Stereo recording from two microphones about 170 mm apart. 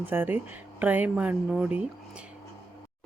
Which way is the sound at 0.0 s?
10° right (ahead or behind).